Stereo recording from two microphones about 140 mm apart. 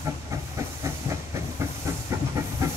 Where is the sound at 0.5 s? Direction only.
20° right (ahead or behind).